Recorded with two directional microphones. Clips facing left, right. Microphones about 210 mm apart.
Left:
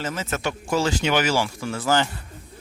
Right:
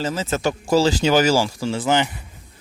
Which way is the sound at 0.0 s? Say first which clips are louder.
Right 5 dB; 30° right (ahead or behind).